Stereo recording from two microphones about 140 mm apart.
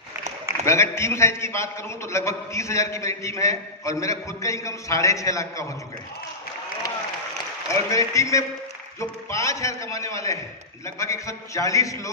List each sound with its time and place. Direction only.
0.7 s a man's voice: 20° left (ahead or behind)
7.7 s a man's voice: 20° left (ahead or behind)